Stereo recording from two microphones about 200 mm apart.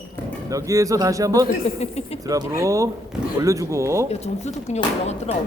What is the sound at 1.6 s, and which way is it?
Speech, 30° left (ahead or behind).